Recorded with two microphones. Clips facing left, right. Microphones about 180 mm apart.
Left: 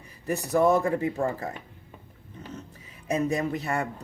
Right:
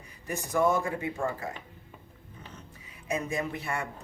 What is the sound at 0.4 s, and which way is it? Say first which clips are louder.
Speech: left 4 dB; 40° left (ahead or behind).